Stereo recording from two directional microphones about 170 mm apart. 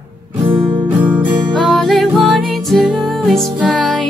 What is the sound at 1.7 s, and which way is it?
Music, centre (ahead or behind).